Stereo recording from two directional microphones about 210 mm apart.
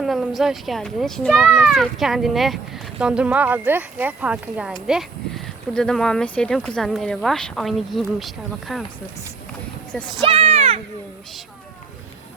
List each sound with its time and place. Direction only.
0.0 s speech: centre (ahead or behind)
10.2 s speech: 25° right (ahead or behind)